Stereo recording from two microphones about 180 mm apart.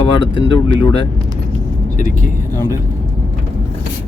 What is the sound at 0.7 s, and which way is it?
Speech, 30° left (ahead or behind).